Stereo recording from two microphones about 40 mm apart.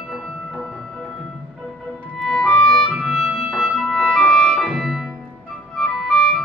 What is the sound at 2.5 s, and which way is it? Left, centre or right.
Music, left.